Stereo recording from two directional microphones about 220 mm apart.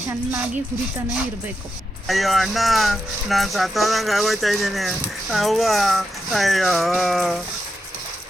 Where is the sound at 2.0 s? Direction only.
Centre (ahead or behind).